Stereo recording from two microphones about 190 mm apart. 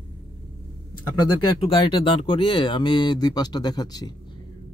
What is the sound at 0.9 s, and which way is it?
Speech, 25° left (ahead or behind).